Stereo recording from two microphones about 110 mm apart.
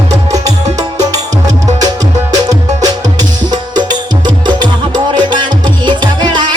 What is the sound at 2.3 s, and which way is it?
Music, 35° right (ahead or behind).